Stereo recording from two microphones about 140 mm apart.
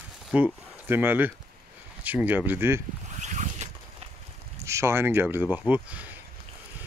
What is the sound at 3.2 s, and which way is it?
Boat, 60° right (ahead or behind).